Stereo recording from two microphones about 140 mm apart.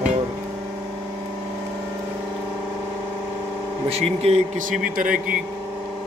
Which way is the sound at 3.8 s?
50° right (ahead or behind).